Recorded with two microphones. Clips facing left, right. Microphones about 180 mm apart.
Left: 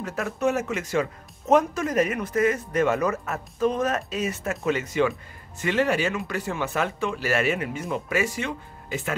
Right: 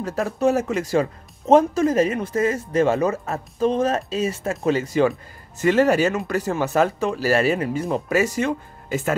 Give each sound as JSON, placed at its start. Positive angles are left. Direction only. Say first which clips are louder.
{"t": 0.0, "sound": "speech", "louder": "right 5 dB", "side_deg": -30}